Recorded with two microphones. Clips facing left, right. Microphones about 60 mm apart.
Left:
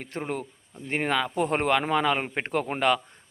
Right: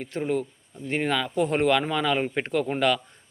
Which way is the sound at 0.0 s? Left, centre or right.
Left.